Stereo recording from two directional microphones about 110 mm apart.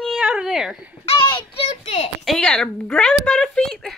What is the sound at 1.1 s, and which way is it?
Child singing, 55° left (ahead or behind).